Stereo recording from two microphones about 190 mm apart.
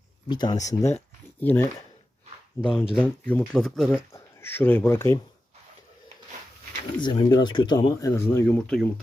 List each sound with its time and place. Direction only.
0.3 s speech: 20° left (ahead or behind)
7.0 s speech: 25° left (ahead or behind); by 8.9 s 5° left (ahead or behind)